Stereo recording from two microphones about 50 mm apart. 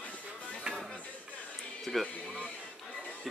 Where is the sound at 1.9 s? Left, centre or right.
Centre.